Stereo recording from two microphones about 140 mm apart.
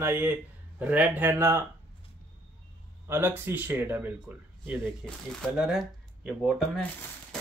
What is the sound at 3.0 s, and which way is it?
Speech, 15° right (ahead or behind).